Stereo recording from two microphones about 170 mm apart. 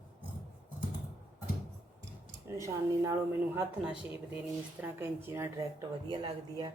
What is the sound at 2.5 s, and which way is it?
A woman's voice, 20° right (ahead or behind).